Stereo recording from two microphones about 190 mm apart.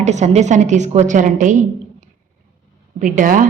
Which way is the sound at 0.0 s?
35° right (ahead or behind).